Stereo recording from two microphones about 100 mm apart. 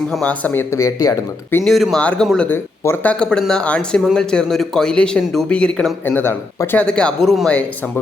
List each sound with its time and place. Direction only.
0.1 s speech: 10° left (ahead or behind)
0.7 s speech: 30° left (ahead or behind)
1.6 s speech: centre (ahead or behind)